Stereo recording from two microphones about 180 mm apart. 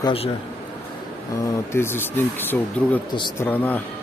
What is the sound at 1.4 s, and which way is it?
Speech, 15° left (ahead or behind).